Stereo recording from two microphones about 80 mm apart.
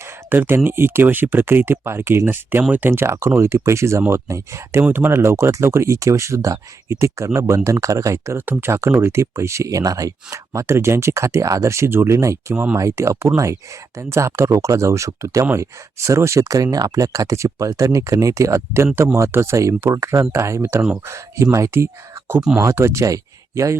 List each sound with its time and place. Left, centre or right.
0.3 s speech: right
8.4 s speech: right